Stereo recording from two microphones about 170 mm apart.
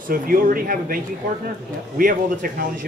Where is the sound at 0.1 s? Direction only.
55° right (ahead or behind).